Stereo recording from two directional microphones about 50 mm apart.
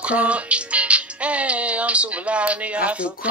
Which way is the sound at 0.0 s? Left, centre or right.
Right.